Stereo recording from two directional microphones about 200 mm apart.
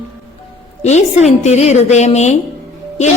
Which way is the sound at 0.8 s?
35° left (ahead or behind).